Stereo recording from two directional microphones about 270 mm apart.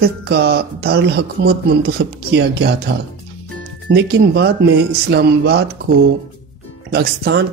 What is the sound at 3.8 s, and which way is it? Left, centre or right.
Speech, right.